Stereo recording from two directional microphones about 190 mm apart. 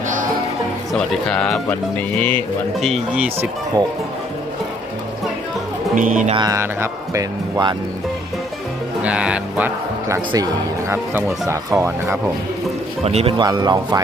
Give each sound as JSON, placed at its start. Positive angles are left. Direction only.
{"t": 0.9, "sound": "speech", "side_deg": 5}
{"t": 2.8, "sound": "speech", "side_deg": 0}
{"t": 5.9, "sound": "speech", "side_deg": -45}
{"t": 6.3, "sound": "speech", "side_deg": -20}
{"t": 9.0, "sound": "speech", "side_deg": -5}
{"t": 13.0, "sound": "speech", "side_deg": -35}
{"t": 13.4, "sound": "speech", "side_deg": -20}